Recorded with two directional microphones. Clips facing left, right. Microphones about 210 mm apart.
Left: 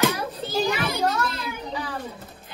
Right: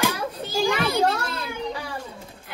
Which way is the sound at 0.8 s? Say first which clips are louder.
Right 3 dB; 30° right (ahead or behind).